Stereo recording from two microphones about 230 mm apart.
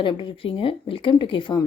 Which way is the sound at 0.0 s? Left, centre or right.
Left.